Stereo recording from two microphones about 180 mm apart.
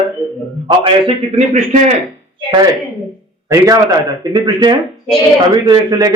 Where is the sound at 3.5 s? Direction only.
20° right (ahead or behind).